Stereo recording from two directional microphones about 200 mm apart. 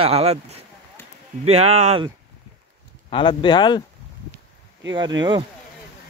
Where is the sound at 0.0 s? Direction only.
30° right (ahead or behind).